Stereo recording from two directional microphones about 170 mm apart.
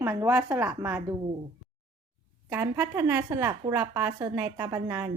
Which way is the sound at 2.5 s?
15° right (ahead or behind).